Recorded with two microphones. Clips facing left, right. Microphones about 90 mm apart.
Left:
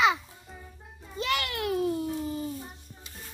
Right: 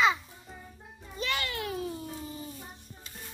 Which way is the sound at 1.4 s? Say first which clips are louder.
Left 6 dB; 70° left (ahead or behind).